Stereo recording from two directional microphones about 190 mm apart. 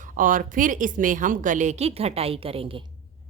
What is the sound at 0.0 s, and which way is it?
A woman's voice, 45° right (ahead or behind).